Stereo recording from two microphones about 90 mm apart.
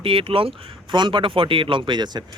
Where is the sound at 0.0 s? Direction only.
80° right.